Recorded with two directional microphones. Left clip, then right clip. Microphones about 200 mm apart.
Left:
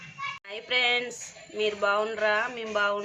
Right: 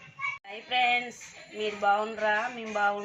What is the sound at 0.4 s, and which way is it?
Child singing, 20° left (ahead or behind).